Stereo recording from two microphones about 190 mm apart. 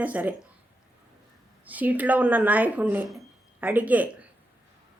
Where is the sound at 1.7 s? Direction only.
10° right (ahead or behind).